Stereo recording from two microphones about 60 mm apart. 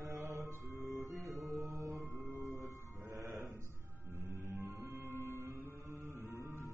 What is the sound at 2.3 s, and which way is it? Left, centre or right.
Music, right.